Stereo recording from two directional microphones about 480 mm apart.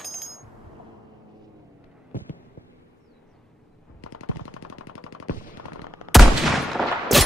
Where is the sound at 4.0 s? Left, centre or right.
Left.